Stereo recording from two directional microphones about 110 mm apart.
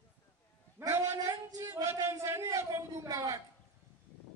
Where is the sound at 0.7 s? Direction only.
20° right (ahead or behind).